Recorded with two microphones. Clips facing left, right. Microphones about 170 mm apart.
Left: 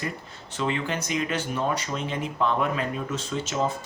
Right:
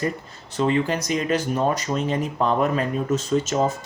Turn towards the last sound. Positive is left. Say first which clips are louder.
# right 6 dB
turn(degrees=-40)  # may be behind; listen again after turning